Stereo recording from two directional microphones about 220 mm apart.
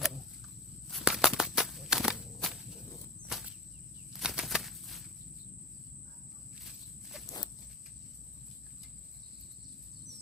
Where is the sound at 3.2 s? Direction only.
Centre (ahead or behind).